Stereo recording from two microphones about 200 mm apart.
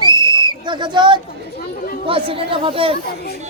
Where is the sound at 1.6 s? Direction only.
45° left (ahead or behind).